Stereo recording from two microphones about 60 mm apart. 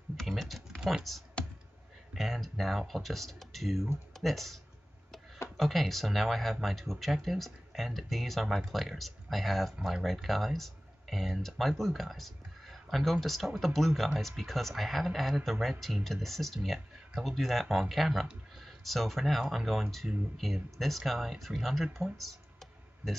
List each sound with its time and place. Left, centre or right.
0.2 s typing: centre
1.4 s computer keyboard: centre
2.1 s speech: centre
5.6 s speech: centre
9.8 s speech: centre
10.2 s speech: centre
22.0 s computer keyboard: centre